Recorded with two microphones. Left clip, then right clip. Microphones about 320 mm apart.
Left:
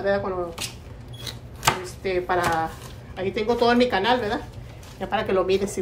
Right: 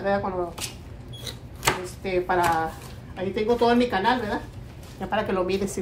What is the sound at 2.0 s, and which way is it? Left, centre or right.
A woman's voice, centre.